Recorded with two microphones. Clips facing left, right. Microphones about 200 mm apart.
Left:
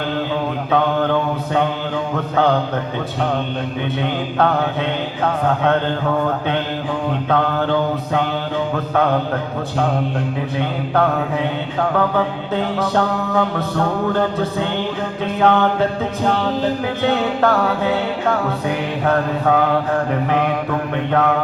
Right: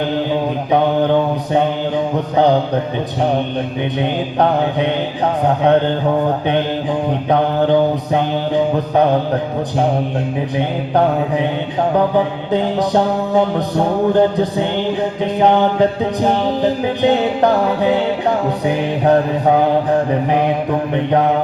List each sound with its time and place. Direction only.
0.7 s mantra: 15° right (ahead or behind)
10.6 s mantra: 15° right (ahead or behind)